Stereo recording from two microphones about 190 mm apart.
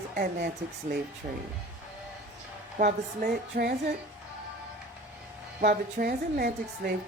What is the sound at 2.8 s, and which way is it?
Speech, 50° right (ahead or behind).